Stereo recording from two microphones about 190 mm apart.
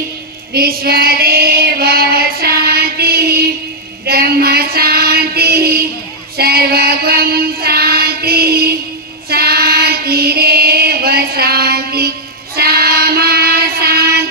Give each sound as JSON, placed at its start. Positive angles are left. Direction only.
{"t": 0.5, "sound": "female singing", "side_deg": -55}
{"t": 6.3, "sound": "child singing", "side_deg": -55}